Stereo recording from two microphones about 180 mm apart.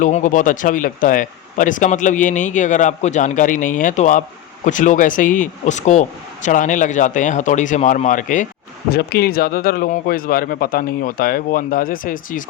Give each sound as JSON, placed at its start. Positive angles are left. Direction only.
{"t": 0.0, "sound": "speech", "side_deg": 45}
{"t": 8.9, "sound": "speech", "side_deg": 60}